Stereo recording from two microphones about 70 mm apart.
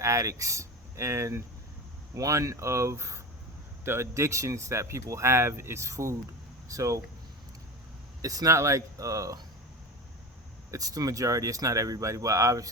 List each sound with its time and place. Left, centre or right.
0.0 s speech: right
2.1 s speech: right
8.2 s speech: right
10.7 s speech: right